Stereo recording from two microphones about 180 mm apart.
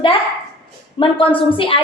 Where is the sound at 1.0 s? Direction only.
30° left (ahead or behind).